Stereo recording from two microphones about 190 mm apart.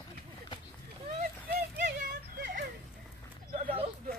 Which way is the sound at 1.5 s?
40° right (ahead or behind).